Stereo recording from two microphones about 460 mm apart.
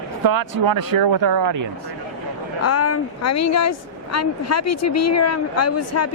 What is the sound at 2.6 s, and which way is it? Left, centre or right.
Speech, left.